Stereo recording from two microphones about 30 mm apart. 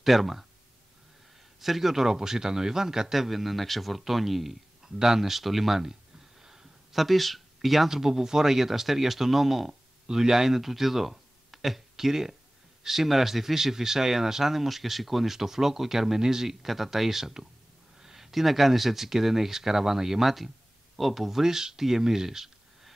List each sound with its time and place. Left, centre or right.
0.0 s speech: centre
1.6 s speech: centre
2.0 s speech: centre
3.2 s speech: centre
4.8 s speech: centre
7.9 s speech: centre
16.6 s speech: centre
18.0 s a sound: centre
18.3 s speech: centre